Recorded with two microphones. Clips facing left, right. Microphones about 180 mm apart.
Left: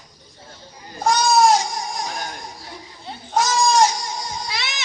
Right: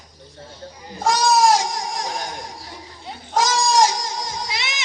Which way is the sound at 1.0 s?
90° right.